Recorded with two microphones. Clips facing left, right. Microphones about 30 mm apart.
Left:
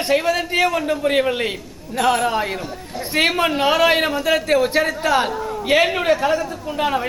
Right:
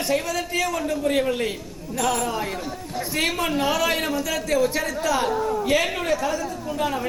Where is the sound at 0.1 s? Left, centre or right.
Left.